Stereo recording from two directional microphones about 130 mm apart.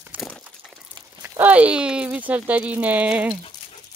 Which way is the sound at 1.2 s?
10° right (ahead or behind).